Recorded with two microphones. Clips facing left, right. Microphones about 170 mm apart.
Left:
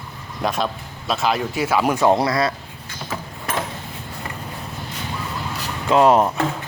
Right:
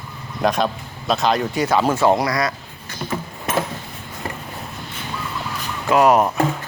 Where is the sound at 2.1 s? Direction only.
25° left (ahead or behind).